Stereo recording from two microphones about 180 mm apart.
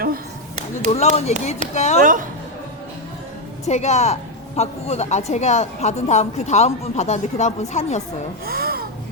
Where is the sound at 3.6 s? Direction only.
40° left (ahead or behind).